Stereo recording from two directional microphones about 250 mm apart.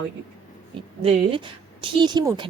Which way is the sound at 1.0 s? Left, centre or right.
Right.